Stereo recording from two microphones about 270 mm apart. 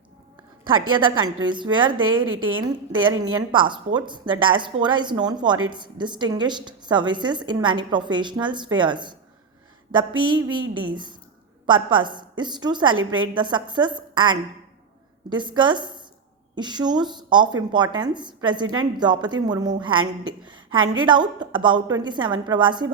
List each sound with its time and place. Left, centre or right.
0.9 s a woman's voice: centre
2.2 s a woman's voice: right
2.9 s a woman's voice: centre
10.2 s a woman's voice: centre
20.4 s a sound: centre
20.9 s a woman's voice: centre